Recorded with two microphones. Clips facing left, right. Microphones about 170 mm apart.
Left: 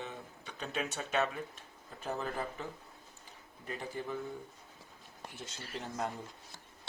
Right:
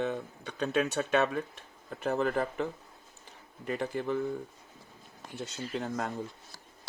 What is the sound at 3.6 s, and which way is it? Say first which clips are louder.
Speech: right 8 dB; 70° right (ahead or behind).